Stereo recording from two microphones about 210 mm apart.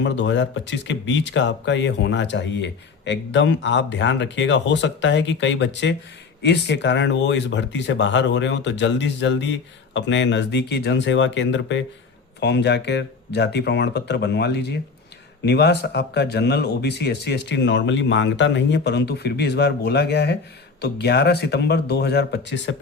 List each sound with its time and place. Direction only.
0.0 s speech: 60° left (ahead or behind)